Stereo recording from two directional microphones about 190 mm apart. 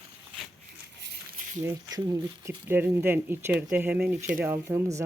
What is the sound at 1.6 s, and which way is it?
Speech, 20° right (ahead or behind).